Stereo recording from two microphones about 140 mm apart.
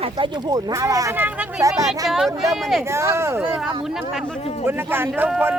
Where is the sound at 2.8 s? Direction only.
20° right (ahead or behind).